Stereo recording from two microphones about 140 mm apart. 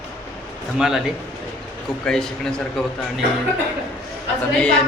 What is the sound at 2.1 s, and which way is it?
Speech, 5° left (ahead or behind).